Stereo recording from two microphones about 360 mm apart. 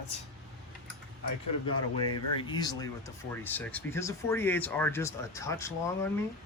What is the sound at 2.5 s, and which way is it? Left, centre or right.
Speech, centre.